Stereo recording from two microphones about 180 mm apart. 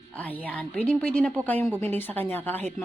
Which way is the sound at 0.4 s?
10° left (ahead or behind).